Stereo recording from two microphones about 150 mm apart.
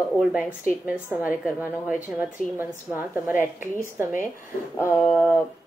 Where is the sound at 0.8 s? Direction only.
10° right (ahead or behind).